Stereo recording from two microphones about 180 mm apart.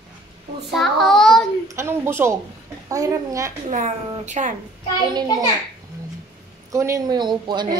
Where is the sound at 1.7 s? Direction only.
15° right (ahead or behind).